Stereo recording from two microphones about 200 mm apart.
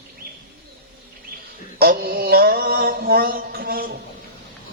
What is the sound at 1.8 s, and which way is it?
Mantra, 50° right (ahead or behind).